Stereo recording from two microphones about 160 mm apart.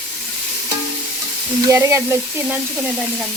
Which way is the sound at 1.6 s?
20° right (ahead or behind).